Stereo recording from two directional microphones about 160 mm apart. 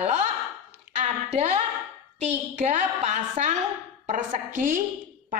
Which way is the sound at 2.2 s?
45° right (ahead or behind).